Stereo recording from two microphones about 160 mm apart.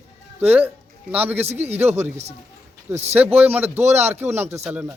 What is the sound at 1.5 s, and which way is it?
Speech, 40° right (ahead or behind).